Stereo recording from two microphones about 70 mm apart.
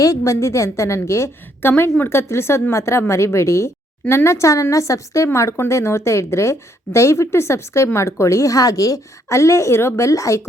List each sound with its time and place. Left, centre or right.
0.0 s a woman's voice: left